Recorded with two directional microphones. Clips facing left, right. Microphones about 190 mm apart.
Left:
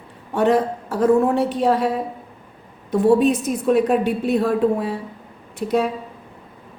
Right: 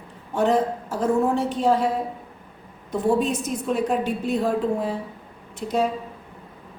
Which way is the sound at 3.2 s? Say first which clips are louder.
Left 6 dB; 60° left (ahead or behind).